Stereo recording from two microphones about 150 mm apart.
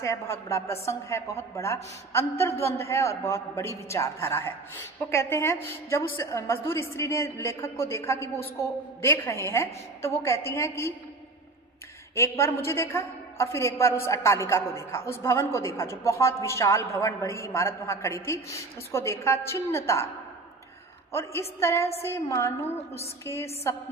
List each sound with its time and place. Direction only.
0.0 s a woman's voice: 20° left (ahead or behind)
12.2 s a woman's voice: 15° left (ahead or behind)
21.1 s a woman's voice: 15° left (ahead or behind)